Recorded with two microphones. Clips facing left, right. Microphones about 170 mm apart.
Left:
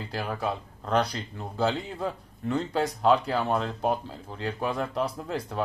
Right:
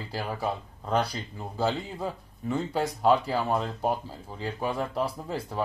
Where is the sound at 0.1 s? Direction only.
5° right (ahead or behind).